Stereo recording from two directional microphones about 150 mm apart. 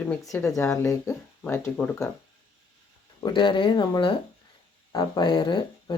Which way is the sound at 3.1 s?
30° left (ahead or behind).